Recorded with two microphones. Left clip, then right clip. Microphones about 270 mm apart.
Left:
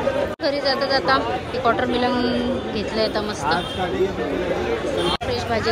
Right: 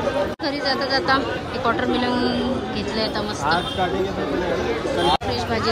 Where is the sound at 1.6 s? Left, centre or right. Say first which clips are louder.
Left 1 dB; centre.